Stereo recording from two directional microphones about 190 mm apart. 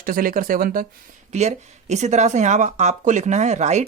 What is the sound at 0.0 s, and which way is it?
Speech, 50° right (ahead or behind).